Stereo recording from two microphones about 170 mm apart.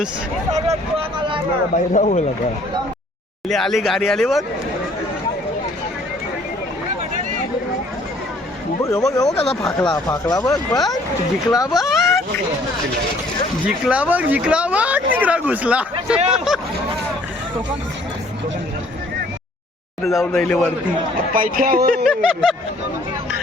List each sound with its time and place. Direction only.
0.5 s vehicle: 35° right (ahead or behind)
1.7 s a man's voice: 45° left (ahead or behind)
3.5 s speech: centre (ahead or behind)
8.8 s speech: 20° left (ahead or behind)
9.3 s speech: 35° left (ahead or behind)
9.6 s speech: 20° left (ahead or behind)
11.7 s speech: centre (ahead or behind)
13.7 s speech: 5° right (ahead or behind)
16.3 s a sound: centre (ahead or behind)
20.1 s speech: centre (ahead or behind)
21.3 s speech: 55° right (ahead or behind)
22.0 s speech: centre (ahead or behind)